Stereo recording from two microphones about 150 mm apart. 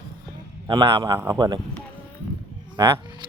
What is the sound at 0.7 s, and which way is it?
Speech, 30° right (ahead or behind).